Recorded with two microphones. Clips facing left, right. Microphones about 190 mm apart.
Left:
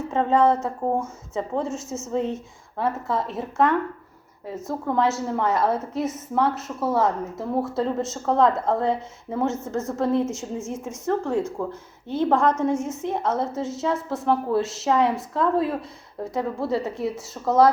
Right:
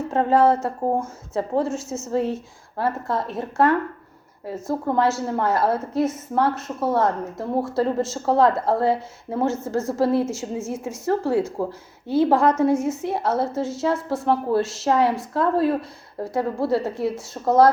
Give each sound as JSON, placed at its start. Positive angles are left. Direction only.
{"t": 0.1, "sound": "a woman's voice", "side_deg": -5}
{"t": 0.8, "sound": "a woman's voice", "side_deg": -15}
{"t": 1.0, "sound": "a woman's voice", "side_deg": 0}
{"t": 11.6, "sound": "speech", "side_deg": -35}
{"t": 12.0, "sound": "a woman's voice", "side_deg": -10}